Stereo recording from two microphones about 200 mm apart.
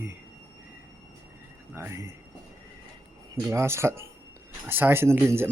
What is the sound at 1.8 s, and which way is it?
Speech, 10° right (ahead or behind).